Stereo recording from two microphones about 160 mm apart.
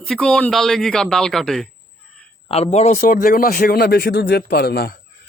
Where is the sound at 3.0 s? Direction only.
65° left (ahead or behind).